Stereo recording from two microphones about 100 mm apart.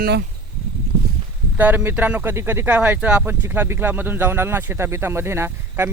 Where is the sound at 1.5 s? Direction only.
20° right (ahead or behind).